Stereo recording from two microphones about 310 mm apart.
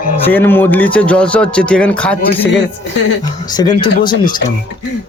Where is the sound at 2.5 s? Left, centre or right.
Left.